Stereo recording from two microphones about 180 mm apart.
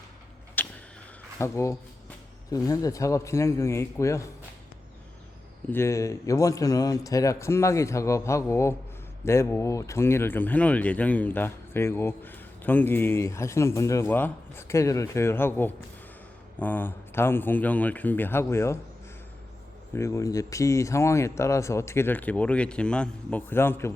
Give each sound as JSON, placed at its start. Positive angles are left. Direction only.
{"t": 0.6, "sound": "vehicle", "side_deg": 10}
{"t": 1.4, "sound": "speech", "side_deg": 15}
{"t": 5.7, "sound": "speech", "side_deg": 15}
{"t": 19.9, "sound": "speech", "side_deg": 15}